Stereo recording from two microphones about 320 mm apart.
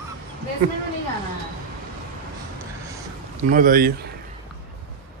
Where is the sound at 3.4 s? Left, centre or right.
Right.